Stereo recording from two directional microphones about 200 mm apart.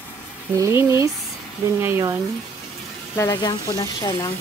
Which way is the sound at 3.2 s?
15° left (ahead or behind).